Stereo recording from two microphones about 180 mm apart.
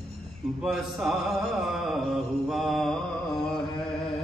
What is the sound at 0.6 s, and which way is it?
Mantra, centre (ahead or behind).